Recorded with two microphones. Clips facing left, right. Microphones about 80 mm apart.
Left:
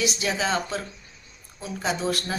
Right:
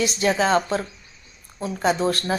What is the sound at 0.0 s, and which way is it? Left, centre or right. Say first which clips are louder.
Speech: right 5 dB; right.